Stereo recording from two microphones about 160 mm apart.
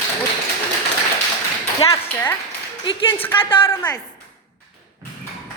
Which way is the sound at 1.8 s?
15° left (ahead or behind).